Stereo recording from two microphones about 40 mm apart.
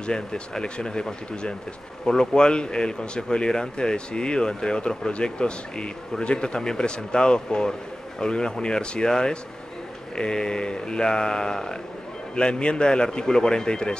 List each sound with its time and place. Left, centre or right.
0.0 s a man's voice: left
2.0 s a man's voice: centre